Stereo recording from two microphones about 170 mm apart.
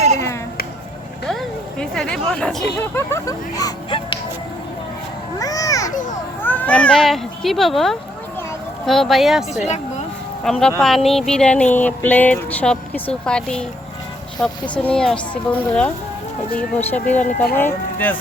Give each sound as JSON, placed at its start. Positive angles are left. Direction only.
{"t": 1.3, "sound": "speech", "side_deg": 5}
{"t": 2.9, "sound": "speech", "side_deg": 20}
{"t": 5.4, "sound": "a sound", "side_deg": 20}
{"t": 5.9, "sound": "a child's voice", "side_deg": 50}
{"t": 6.4, "sound": "speech", "side_deg": 10}